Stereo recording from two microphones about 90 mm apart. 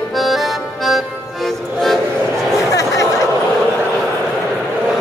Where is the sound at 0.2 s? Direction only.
Centre (ahead or behind).